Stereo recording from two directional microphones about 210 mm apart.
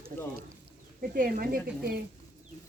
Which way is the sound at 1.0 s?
40° right (ahead or behind).